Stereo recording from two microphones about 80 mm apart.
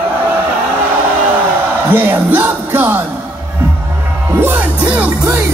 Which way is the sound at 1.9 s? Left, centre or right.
Right.